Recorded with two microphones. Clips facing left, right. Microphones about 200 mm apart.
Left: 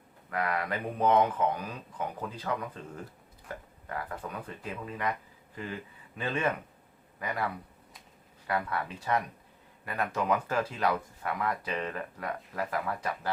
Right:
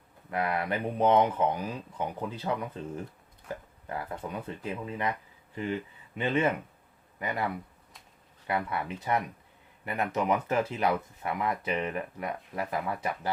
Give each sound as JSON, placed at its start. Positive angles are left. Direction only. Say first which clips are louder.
{"t": 0.3, "sound": "speech", "louder": "right 2 dB", "side_deg": -25}